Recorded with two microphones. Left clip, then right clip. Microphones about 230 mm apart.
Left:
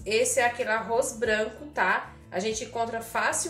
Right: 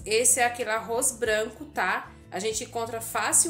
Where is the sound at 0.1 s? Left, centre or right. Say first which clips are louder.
Even; right.